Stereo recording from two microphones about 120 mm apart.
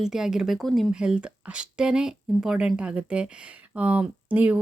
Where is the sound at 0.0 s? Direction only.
5° right (ahead or behind).